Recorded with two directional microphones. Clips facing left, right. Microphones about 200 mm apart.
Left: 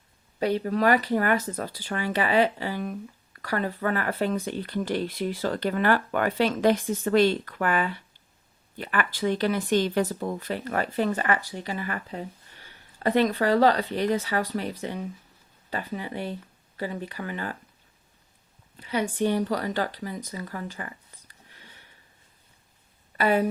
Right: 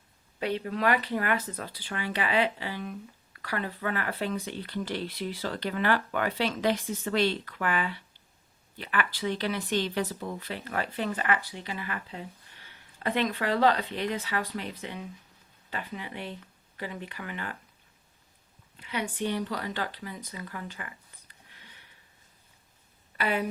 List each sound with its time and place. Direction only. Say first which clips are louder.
0.3 s speech: left 6 dB; 40° left (ahead or behind)
18.8 s speech: left 6 dB; 40° left (ahead or behind)
23.1 s speech: left 6 dB; 45° left (ahead or behind)